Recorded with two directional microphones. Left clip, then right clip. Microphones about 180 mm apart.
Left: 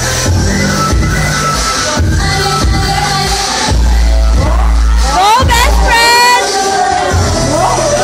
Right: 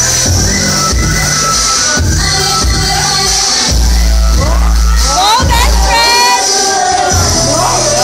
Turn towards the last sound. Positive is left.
turn(degrees=25)  # may be behind; listen again after turning